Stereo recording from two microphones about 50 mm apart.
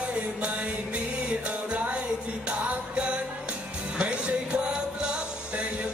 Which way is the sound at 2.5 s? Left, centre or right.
Right.